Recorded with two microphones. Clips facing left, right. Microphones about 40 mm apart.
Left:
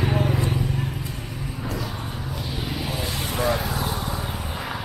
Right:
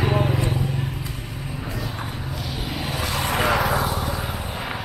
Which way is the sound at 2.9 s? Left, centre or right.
Right.